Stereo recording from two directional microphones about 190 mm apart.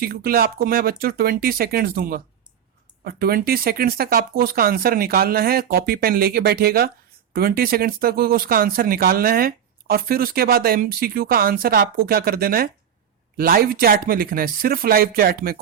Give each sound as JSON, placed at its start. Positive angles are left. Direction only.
{"t": 0.0, "sound": "speech", "side_deg": -50}